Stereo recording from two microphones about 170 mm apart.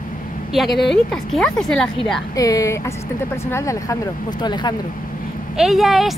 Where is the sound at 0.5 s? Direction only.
Centre (ahead or behind).